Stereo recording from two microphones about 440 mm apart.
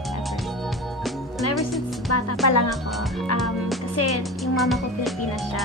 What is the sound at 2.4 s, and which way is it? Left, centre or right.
Speech, left.